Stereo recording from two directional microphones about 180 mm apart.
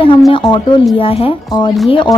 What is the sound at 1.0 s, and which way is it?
A woman's voice, 30° left (ahead or behind).